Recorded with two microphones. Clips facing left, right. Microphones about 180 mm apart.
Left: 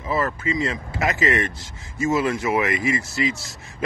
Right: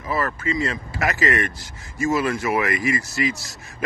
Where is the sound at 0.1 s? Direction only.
20° left (ahead or behind).